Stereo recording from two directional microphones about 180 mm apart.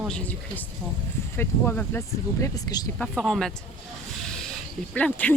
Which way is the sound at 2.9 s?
5° left (ahead or behind).